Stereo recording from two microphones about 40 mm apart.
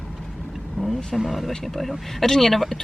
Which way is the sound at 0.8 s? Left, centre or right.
Centre.